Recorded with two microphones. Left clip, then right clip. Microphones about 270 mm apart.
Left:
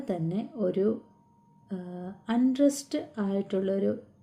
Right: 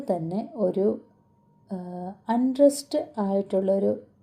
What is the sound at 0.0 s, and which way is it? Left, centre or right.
Speech, centre.